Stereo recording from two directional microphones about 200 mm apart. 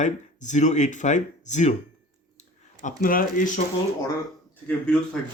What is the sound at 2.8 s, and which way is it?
Speech, 40° left (ahead or behind).